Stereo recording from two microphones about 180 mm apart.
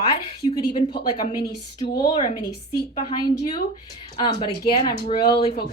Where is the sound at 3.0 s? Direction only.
25° left (ahead or behind).